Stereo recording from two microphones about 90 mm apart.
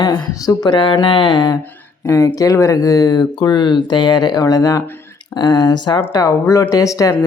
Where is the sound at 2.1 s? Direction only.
35° left (ahead or behind); by 6.0 s 55° left (ahead or behind).